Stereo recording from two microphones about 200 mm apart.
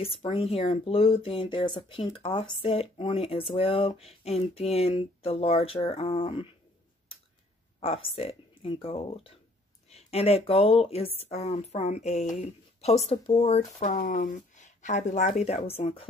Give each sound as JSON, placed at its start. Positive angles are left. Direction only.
{"t": 0.0, "sound": "speech", "side_deg": 25}
{"t": 7.8, "sound": "speech", "side_deg": 30}